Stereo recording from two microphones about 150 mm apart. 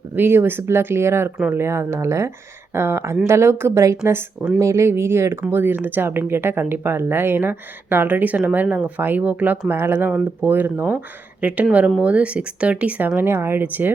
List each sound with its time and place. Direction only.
0.2 s speech: 15° right (ahead or behind)